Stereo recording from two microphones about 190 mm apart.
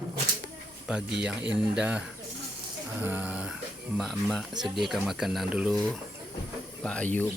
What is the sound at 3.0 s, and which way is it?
Speech, 10° right (ahead or behind).